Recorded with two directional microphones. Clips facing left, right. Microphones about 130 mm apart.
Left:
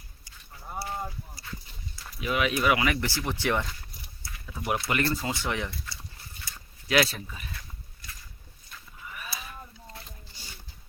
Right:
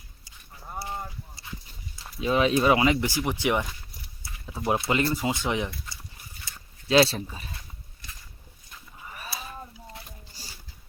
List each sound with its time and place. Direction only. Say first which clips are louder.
1.4 s clip-clop: even; 25° right (ahead or behind)
2.2 s speech: right 4 dB; 30° right (ahead or behind)
4.2 s speech: right 4 dB; 25° right (ahead or behind)
9.0 s a sound: right 2 dB; 35° right (ahead or behind)
9.7 s a sound: right 2 dB; 20° right (ahead or behind)
10.4 s music: right 1 dB; 40° right (ahead or behind)